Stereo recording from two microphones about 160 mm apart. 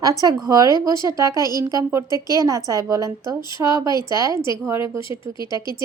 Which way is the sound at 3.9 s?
25° left (ahead or behind).